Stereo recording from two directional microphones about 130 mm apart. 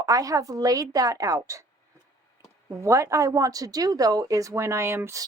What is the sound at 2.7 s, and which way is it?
A woman's voice, 25° right (ahead or behind).